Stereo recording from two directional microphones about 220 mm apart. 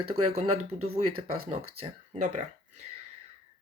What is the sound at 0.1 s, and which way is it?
Speech, 30° right (ahead or behind).